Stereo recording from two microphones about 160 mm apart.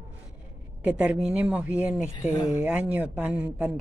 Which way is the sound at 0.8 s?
5° right (ahead or behind).